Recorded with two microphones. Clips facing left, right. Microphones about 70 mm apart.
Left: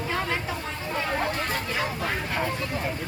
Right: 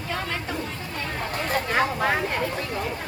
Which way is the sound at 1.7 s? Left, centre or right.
Right.